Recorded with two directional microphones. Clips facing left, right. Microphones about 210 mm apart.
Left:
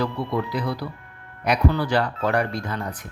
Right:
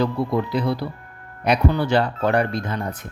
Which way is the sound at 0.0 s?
25° right (ahead or behind).